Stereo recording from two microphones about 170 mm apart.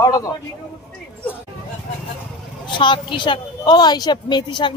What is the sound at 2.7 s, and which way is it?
A woman's voice, 30° left (ahead or behind).